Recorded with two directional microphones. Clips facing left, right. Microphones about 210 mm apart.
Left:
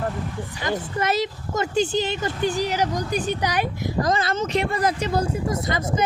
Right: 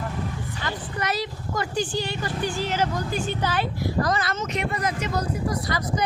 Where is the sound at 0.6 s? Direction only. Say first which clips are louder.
Left 6 dB; 25° left (ahead or behind).